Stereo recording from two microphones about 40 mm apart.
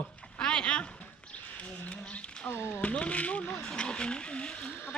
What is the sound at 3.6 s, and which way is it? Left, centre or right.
Speech, left.